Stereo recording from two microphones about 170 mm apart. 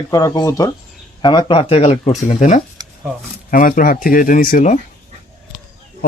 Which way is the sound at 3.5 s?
55° left (ahead or behind).